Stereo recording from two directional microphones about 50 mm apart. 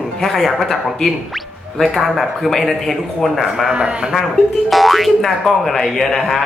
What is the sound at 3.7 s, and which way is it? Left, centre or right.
Speech, centre.